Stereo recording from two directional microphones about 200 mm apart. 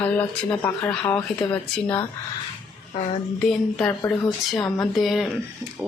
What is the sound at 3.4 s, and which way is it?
Speech, 5° left (ahead or behind).